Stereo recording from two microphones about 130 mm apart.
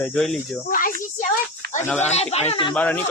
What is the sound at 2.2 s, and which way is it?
Speech, 55° left (ahead or behind).